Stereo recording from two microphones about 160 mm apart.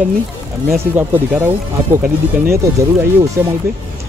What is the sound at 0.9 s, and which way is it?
Speech, 15° right (ahead or behind).